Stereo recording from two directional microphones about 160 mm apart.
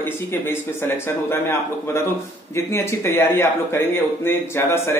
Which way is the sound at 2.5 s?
15° left (ahead or behind).